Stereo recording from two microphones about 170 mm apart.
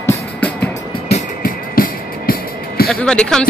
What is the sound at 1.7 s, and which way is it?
Music, 60° left (ahead or behind).